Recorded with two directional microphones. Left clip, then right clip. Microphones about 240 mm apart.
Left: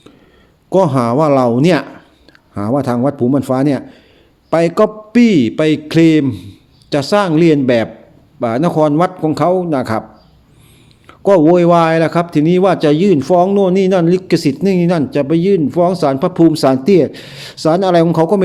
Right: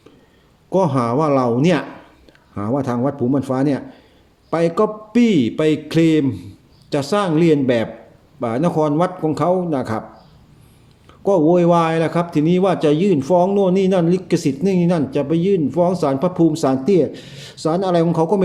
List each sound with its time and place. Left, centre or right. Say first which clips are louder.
0.7 s a man's voice: left 5 dB; left
11.0 s a man's voice: left 6 dB; left